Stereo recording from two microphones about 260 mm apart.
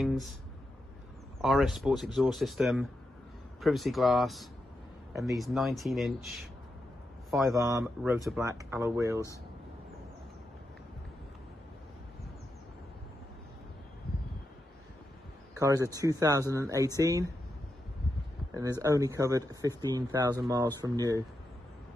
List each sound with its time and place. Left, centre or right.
0.0 s guitar: centre
1.4 s a man's voice: centre
7.5 s speech: centre
15.6 s speech: centre
18.8 s speech: centre